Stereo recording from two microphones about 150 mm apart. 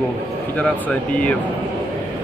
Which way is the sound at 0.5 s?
10° left (ahead or behind).